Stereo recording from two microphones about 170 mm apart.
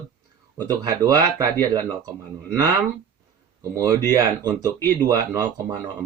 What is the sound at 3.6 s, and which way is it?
Speech, 20° right (ahead or behind).